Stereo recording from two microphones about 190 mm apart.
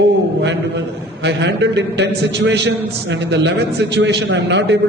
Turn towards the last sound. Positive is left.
turn(degrees=-70)  # may be behind; listen again after turning